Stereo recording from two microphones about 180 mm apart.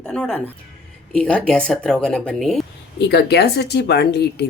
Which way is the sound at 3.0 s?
65° left (ahead or behind).